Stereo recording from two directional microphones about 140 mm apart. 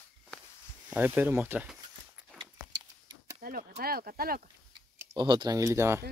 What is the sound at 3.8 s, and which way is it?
Speech, 90° right.